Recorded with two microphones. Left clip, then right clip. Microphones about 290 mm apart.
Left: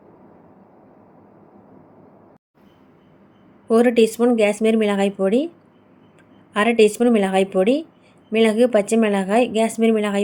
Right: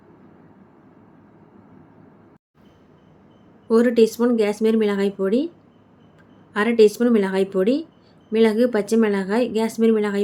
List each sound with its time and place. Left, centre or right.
3.7 s speech: centre
6.5 s speech: centre